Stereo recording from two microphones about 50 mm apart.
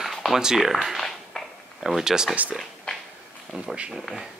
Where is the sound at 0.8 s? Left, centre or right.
Centre.